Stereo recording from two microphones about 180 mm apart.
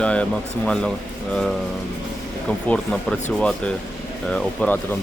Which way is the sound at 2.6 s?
5° left (ahead or behind).